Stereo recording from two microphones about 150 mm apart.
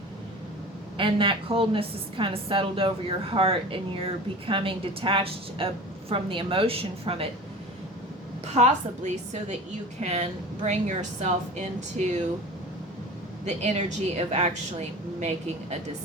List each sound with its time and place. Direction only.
0.9 s a woman's voice: 35° right (ahead or behind)
8.5 s a woman's voice: 50° right (ahead or behind)
13.4 s a woman's voice: 50° right (ahead or behind)